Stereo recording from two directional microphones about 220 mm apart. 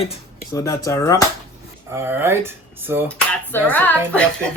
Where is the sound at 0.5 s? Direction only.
15° left (ahead or behind).